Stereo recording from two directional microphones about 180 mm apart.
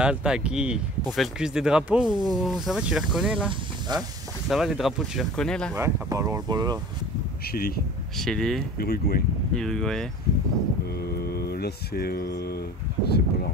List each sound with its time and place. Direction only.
0.0 s speech: 5° right (ahead or behind)
3.9 s speech: 25° right (ahead or behind)
4.5 s speech: centre (ahead or behind)
5.8 s speech: 15° right (ahead or behind)
7.5 s speech: 55° left (ahead or behind)
8.2 s speech: 5° left (ahead or behind)
8.7 s speech: 60° left (ahead or behind)
9.6 s speech: 5° left (ahead or behind)
11.1 s speech: 60° left (ahead or behind)